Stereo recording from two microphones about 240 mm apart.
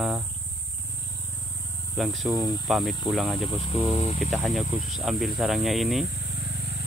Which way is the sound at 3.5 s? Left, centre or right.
Left.